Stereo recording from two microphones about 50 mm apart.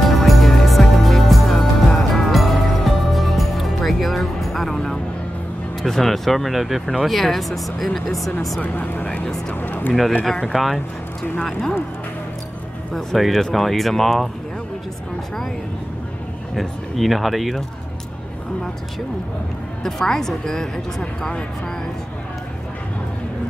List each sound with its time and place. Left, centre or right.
0.1 s music: centre
5.8 s speech: centre
8.5 s speech: left
9.5 s speech: left
10.5 s speech: centre
12.9 s speech: centre
16.5 s speech: centre
19.8 s a woman's voice: centre